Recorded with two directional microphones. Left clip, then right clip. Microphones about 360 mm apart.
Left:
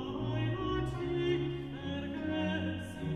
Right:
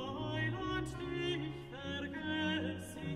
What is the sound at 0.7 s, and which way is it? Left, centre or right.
Music, right.